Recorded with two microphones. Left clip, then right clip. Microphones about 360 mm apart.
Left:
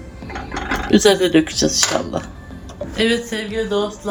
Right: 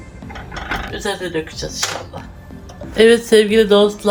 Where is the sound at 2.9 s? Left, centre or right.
Centre.